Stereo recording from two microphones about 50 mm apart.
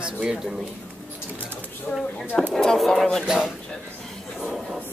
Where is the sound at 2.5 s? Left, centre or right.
Centre.